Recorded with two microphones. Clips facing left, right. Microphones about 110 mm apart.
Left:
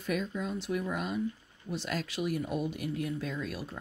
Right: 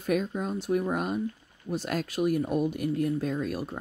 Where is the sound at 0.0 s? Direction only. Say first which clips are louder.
Right 5 dB; 45° right (ahead or behind).